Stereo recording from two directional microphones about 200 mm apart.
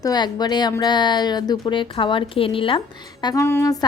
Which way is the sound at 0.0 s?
20° left (ahead or behind).